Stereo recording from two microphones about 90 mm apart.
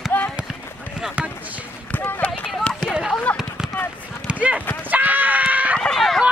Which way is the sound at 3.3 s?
15° left (ahead or behind).